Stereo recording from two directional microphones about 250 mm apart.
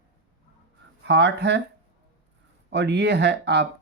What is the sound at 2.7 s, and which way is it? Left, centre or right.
Speech, right.